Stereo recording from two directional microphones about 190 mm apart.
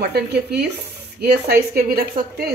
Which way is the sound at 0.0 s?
60° right (ahead or behind).